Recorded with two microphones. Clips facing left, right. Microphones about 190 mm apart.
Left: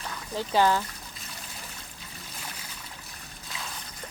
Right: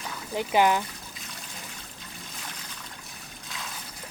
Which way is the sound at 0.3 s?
15° right (ahead or behind).